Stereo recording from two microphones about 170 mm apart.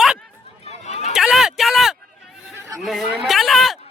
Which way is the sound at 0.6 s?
40° left (ahead or behind).